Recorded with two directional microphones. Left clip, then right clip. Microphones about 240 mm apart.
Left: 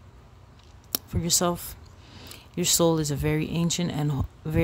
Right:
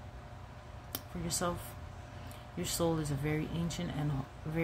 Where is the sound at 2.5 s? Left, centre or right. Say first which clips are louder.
Left 11 dB; left.